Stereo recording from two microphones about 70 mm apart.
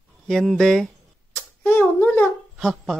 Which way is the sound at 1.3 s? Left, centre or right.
Left.